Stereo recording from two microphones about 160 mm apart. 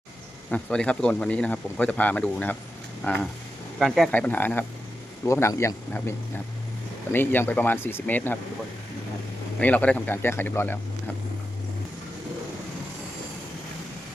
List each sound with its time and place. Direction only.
0.5 s speech: 5° left (ahead or behind)
9.6 s speech: 10° left (ahead or behind)